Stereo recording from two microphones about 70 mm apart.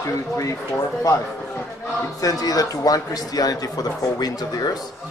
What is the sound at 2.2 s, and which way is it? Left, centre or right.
A man's voice, left.